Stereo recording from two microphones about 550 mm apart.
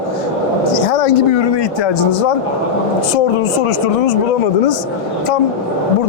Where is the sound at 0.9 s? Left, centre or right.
Left.